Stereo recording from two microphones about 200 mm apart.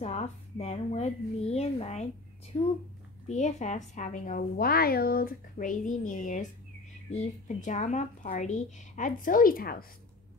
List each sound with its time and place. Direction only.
0.0 s a woman's voice: 35° left (ahead or behind)
2.5 s speech: 20° left (ahead or behind)
3.3 s a woman's voice: 35° left (ahead or behind)